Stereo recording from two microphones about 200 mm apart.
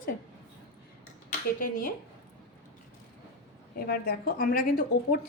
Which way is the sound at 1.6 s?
45° left (ahead or behind).